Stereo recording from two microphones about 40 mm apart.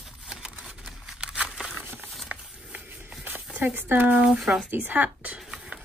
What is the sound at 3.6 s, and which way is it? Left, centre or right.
Speech, right.